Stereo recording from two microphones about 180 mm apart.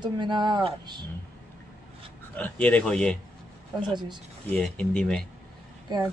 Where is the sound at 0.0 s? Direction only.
25° right (ahead or behind).